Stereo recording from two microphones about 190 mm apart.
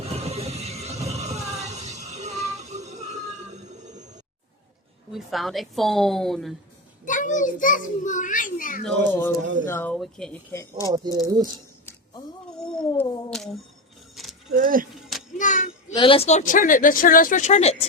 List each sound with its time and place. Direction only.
0.0 s music: 35° right (ahead or behind)
5.1 s a woman's voice: centre (ahead or behind)
7.0 s speech: 40° left (ahead or behind)
9.0 s speech: 10° left (ahead or behind)
9.9 s a woman's voice: centre (ahead or behind)
10.5 s speech: 15° left (ahead or behind)
10.8 s speech: 20° right (ahead or behind)
11.5 s a sound: 15° left (ahead or behind)
12.5 s a sound: 5° left (ahead or behind)
13.0 s cat: centre (ahead or behind)
14.2 s a sound: centre (ahead or behind)
14.5 s speech: 45° right (ahead or behind)
15.4 s a sound: 40° left (ahead or behind)
16.0 s speech: 30° left (ahead or behind)